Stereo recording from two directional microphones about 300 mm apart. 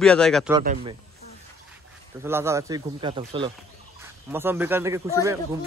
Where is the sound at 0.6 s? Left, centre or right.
Right.